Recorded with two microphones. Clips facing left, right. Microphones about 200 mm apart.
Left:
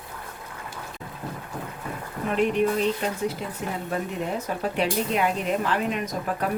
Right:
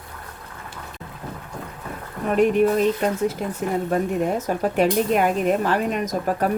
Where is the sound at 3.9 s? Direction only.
45° right (ahead or behind).